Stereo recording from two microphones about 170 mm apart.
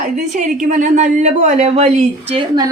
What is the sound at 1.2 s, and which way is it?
Speech, 45° right (ahead or behind).